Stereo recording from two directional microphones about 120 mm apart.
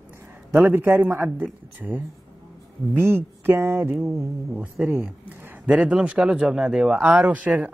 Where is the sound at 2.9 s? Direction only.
20° right (ahead or behind).